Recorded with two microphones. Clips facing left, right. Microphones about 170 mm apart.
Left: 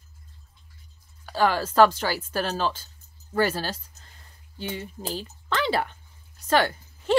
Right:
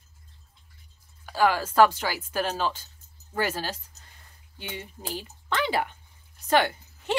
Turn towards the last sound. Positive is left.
turn(degrees=-15)  # may be behind; listen again after turning